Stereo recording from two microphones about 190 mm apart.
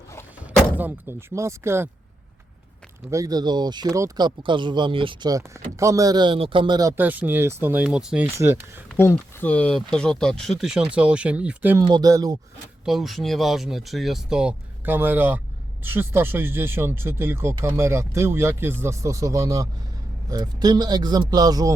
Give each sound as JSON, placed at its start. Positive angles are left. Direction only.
{"t": 0.8, "sound": "speech", "side_deg": -10}
{"t": 3.1, "sound": "speech", "side_deg": -20}
{"t": 9.0, "sound": "speech", "side_deg": 10}
{"t": 11.8, "sound": "speech", "side_deg": -20}
{"t": 12.8, "sound": "speech", "side_deg": 0}